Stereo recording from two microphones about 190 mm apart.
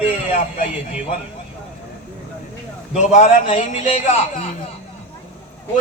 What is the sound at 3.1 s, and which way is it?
Speech, 35° left (ahead or behind).